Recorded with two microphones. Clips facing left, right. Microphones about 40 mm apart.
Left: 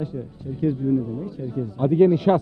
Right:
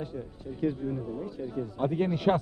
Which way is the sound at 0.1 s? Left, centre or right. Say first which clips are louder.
Left 6 dB; centre.